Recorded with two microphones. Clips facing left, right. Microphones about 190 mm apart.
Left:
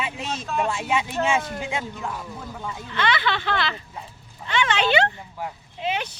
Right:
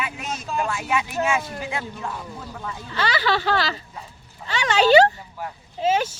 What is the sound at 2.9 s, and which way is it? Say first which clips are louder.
Speech: right 1 dB; 35° right (ahead or behind).